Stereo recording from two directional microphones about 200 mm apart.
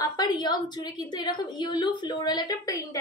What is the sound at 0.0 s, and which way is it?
A woman's voice, 20° left (ahead or behind).